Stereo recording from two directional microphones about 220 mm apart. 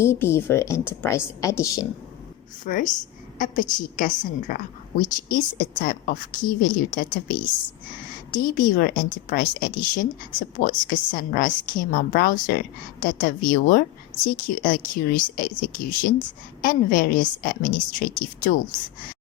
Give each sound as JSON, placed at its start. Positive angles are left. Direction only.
{"t": 0.0, "sound": "speech", "side_deg": 10}
{"t": 2.6, "sound": "a woman's voice", "side_deg": 35}